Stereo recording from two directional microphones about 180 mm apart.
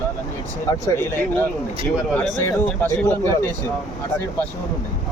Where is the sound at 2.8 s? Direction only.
15° left (ahead or behind).